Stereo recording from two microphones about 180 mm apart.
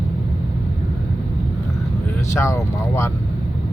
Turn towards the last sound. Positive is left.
turn(degrees=15)  # may be behind; listen again after turning